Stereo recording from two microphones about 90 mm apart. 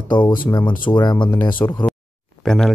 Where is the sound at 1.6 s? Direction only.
30° left (ahead or behind).